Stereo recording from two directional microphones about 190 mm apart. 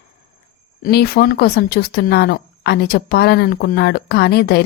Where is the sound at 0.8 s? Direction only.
55° left (ahead or behind).